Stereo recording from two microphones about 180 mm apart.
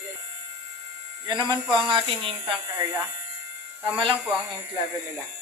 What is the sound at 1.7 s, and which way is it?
Speech, 25° right (ahead or behind).